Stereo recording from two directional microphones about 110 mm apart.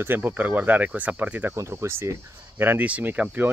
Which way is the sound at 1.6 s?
25° right (ahead or behind).